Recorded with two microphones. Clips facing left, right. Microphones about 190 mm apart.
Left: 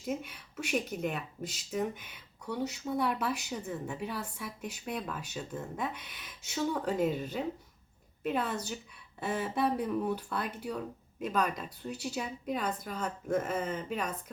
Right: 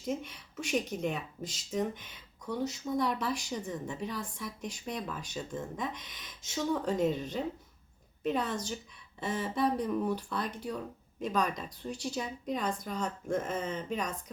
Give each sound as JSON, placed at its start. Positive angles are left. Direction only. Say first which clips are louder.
{"t": 0.1, "sound": "speech", "louder": "right 1 dB", "side_deg": 5}